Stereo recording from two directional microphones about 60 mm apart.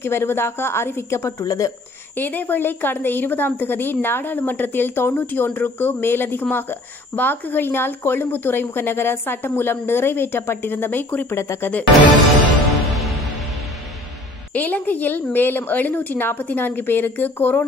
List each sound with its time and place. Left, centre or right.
0.0 s a woman's voice: left
1.2 s speech: left
2.1 s speech: left
11.3 s a woman's voice: left
14.5 s speech: left